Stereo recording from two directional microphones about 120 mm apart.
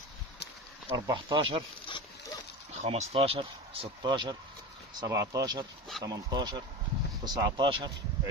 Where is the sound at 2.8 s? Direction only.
55° right (ahead or behind).